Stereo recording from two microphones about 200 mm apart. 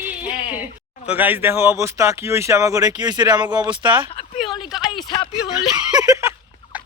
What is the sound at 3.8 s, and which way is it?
Speech, 5° right (ahead or behind).